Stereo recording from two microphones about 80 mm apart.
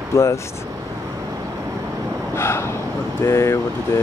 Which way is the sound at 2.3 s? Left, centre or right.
Left.